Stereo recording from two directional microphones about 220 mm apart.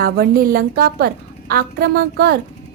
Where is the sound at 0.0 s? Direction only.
40° right (ahead or behind).